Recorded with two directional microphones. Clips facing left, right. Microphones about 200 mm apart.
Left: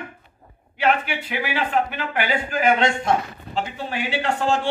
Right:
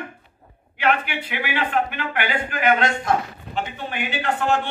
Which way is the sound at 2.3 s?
25° left (ahead or behind).